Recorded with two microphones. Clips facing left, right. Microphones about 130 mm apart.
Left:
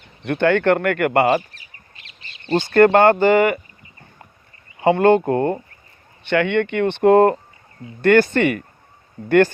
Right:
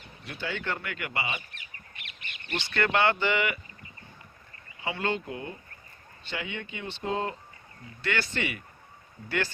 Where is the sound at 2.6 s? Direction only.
50° left (ahead or behind).